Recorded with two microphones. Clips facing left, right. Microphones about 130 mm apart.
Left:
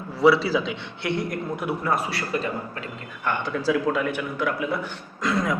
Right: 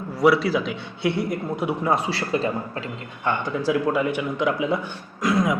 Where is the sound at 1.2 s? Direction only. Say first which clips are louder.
Right 3 dB; 10° right (ahead or behind); by 2.8 s 30° right (ahead or behind).